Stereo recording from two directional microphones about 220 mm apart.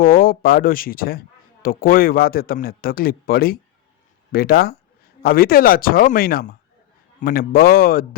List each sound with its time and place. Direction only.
0.0 s a man's voice: 40° left (ahead or behind)